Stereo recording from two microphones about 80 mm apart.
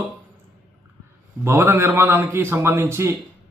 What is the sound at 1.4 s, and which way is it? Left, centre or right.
A man's voice, right.